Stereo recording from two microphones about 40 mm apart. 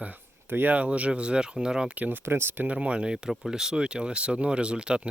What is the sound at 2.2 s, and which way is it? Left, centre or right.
Speech, right.